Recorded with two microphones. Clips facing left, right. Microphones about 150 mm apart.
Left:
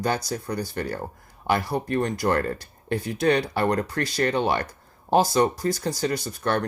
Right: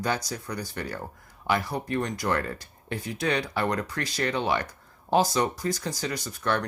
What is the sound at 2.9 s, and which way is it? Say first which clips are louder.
Speech: left 7 dB; 60° left (ahead or behind).